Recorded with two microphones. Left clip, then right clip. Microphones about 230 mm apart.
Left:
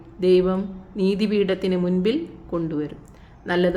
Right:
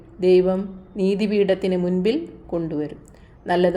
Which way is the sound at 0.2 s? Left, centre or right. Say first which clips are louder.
Right 2 dB; left.